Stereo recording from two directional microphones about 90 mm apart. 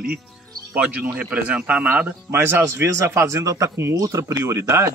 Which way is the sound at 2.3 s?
30° right (ahead or behind).